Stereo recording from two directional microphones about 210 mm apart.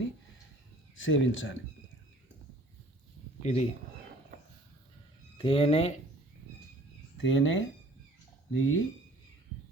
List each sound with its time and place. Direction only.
0.9 s speech: 65° left (ahead or behind)
3.4 s speech: 30° left (ahead or behind)
5.4 s speech: 25° left (ahead or behind)
7.2 s speech: 65° left (ahead or behind)